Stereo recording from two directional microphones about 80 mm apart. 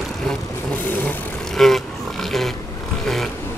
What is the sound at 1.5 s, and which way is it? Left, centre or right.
Vehicle, centre.